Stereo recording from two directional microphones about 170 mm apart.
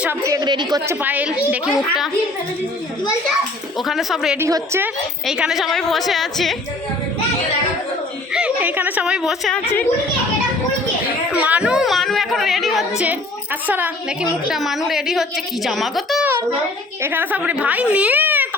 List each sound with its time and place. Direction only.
0.0 s a woman's voice: 15° right (ahead or behind)
0.9 s a woman's voice: 10° right (ahead or behind)
3.8 s a woman's voice: centre (ahead or behind)
4.4 s a woman's voice: 15° right (ahead or behind)
5.2 s a woman's voice: 5° right (ahead or behind)
8.3 s speech: 5° right (ahead or behind)
11.3 s a woman's voice: 5° right (ahead or behind)
17.0 s a woman's voice: 10° right (ahead or behind)